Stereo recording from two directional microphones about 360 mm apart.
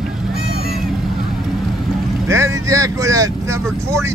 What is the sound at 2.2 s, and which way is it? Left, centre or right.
Speech, centre.